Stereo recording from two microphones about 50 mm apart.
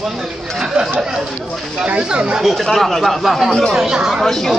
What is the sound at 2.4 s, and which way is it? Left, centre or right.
Speech, centre.